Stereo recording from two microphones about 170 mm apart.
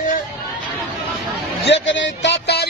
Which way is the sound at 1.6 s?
90° left.